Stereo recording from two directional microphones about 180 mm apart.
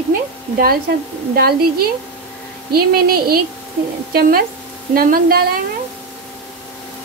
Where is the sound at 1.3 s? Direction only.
55° right (ahead or behind).